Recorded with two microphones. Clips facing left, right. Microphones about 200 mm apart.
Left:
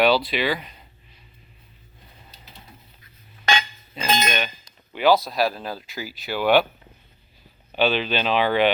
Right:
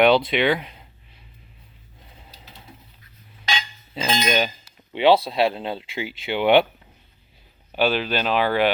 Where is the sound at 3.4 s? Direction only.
60° left (ahead or behind).